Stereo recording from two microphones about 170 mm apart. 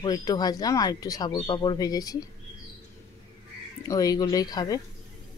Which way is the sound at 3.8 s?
20° left (ahead or behind).